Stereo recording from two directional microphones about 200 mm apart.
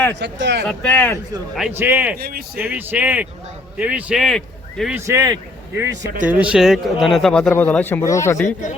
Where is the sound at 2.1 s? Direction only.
50° right (ahead or behind).